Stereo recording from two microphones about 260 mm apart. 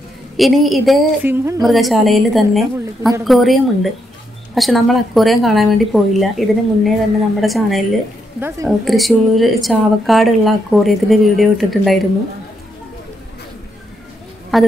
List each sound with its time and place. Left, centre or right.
0.4 s a woman's voice: centre
14.5 s a woman's voice: centre